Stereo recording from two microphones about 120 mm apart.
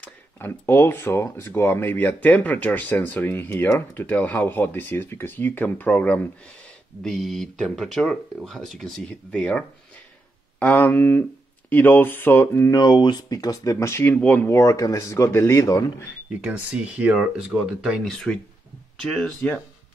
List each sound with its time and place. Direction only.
0.4 s speech: 20° left (ahead or behind)
7.0 s speech: centre (ahead or behind); by 12.7 s 15° left (ahead or behind)
12.7 s speech: 35° left (ahead or behind); by 14.5 s 15° left (ahead or behind)
14.5 s speech: 30° left (ahead or behind)
16.3 s speech: 10° right (ahead or behind)